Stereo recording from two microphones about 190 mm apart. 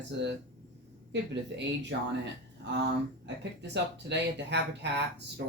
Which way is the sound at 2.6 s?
65° right (ahead or behind).